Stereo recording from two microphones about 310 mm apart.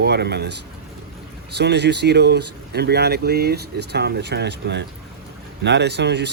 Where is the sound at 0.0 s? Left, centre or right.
Right.